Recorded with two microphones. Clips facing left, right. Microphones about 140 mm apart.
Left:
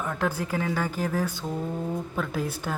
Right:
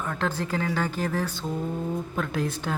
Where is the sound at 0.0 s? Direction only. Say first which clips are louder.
Even; 10° left (ahead or behind).